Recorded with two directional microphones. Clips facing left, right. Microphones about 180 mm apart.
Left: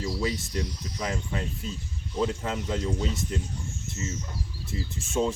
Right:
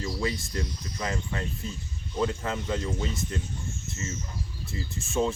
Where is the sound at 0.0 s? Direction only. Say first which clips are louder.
Left 1 dB; 5° left (ahead or behind).